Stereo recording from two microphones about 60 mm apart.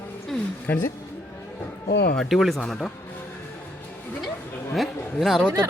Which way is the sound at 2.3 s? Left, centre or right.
Centre.